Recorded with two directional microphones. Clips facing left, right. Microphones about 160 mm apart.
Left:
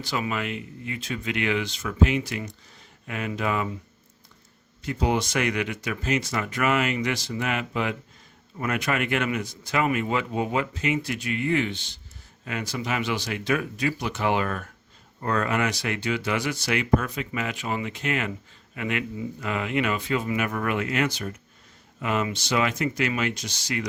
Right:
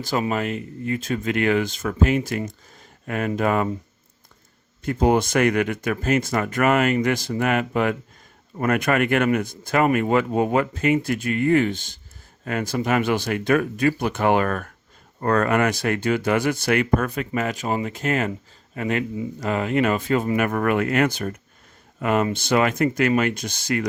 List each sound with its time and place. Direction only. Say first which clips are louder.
0.0 s a man's voice: right 5 dB; 45° right (ahead or behind)
4.8 s a man's voice: right 6 dB; 50° right (ahead or behind)